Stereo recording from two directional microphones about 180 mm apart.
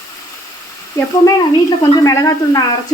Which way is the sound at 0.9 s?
20° left (ahead or behind).